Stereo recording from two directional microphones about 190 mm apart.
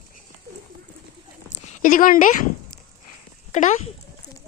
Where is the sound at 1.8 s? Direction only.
45° left (ahead or behind).